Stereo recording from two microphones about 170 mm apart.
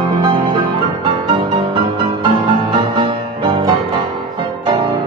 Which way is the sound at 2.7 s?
30° right (ahead or behind).